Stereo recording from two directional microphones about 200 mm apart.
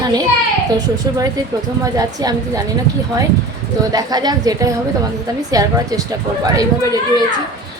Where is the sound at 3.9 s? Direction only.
20° right (ahead or behind).